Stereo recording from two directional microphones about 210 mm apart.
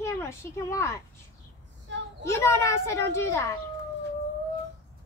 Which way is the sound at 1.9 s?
60° right (ahead or behind).